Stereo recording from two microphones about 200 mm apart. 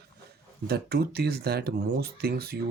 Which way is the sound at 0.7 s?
50° right (ahead or behind).